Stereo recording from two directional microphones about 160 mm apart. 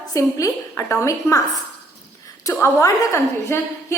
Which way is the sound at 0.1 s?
20° left (ahead or behind).